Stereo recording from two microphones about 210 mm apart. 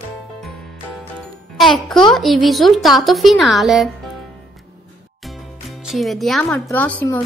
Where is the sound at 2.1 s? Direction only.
Centre (ahead or behind).